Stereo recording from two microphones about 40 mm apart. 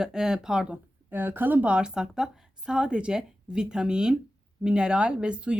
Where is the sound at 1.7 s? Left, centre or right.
Right.